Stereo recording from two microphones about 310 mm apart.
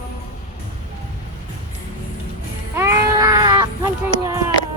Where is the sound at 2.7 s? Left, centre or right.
Centre.